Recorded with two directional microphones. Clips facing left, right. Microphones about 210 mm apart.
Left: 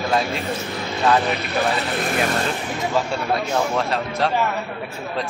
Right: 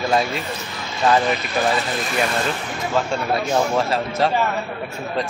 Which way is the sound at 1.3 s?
60° left (ahead or behind).